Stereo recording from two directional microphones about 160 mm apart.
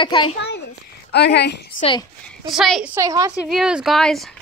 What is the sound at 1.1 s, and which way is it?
Speech, 90° left.